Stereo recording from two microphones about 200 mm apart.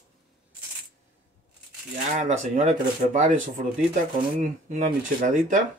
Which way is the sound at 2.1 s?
40° right (ahead or behind).